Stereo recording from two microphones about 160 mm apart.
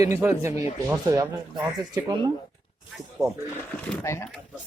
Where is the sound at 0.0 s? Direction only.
15° right (ahead or behind).